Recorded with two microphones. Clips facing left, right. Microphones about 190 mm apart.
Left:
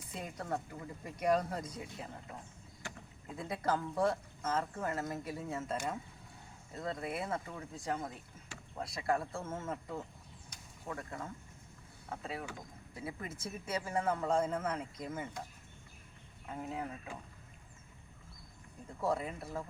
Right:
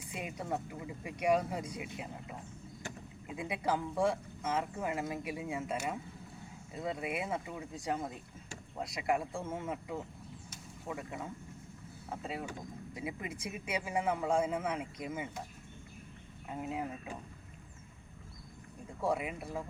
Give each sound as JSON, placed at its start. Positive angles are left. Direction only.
{"t": 0.1, "sound": "speech", "side_deg": -10}
{"t": 3.2, "sound": "speech", "side_deg": -15}
{"t": 10.5, "sound": "vehicle", "side_deg": -10}
{"t": 12.0, "sound": "speech", "side_deg": -15}
{"t": 16.5, "sound": "speech", "side_deg": -20}
{"t": 19.0, "sound": "speech", "side_deg": -10}